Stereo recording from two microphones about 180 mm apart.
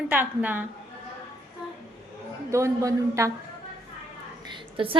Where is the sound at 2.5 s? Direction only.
15° right (ahead or behind).